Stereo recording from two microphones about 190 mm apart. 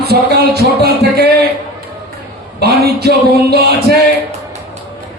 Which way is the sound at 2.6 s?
60° right (ahead or behind).